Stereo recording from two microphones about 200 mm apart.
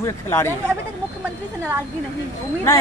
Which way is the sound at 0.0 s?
15° left (ahead or behind).